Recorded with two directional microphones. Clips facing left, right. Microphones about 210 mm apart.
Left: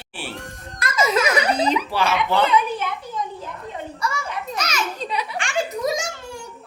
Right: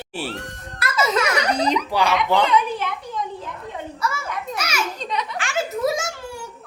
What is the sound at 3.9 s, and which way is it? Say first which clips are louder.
Children playing: right 1 dB; 5° right (ahead or behind).